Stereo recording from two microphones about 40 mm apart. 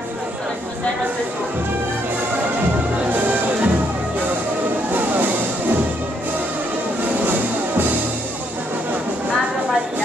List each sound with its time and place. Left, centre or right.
3.1 s music: right
4.9 s music: right